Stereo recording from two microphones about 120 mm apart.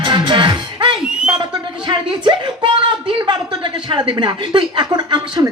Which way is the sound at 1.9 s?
40° right (ahead or behind).